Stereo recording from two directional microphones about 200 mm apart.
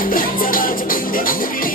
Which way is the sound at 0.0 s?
45° left (ahead or behind).